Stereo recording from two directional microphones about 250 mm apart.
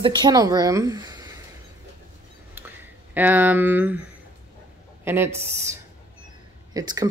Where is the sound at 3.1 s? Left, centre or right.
Centre.